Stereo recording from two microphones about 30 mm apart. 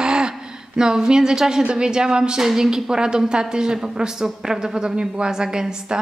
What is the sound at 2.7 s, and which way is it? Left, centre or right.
A woman's voice, right.